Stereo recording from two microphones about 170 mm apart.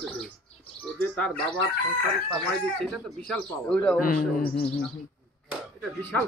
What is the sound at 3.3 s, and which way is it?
Speech, 5° left (ahead or behind).